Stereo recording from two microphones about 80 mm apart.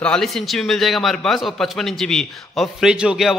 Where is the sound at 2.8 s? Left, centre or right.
Centre.